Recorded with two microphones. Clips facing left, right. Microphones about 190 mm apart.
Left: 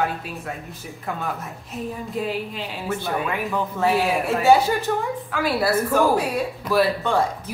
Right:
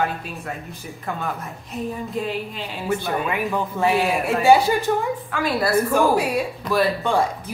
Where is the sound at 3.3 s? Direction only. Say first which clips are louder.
Right 1 dB; 15° right (ahead or behind).